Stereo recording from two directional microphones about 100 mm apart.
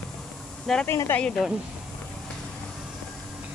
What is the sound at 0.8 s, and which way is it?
Speech, 25° left (ahead or behind).